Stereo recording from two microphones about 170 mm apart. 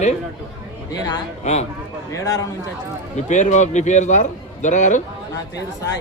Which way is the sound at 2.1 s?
15° left (ahead or behind).